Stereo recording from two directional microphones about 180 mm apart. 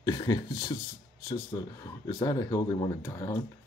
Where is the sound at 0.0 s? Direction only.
25° left (ahead or behind).